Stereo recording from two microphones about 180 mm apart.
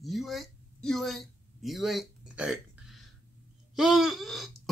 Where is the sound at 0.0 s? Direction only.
Centre (ahead or behind).